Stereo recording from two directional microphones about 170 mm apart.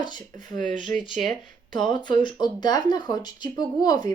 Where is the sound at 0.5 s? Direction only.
50° right (ahead or behind).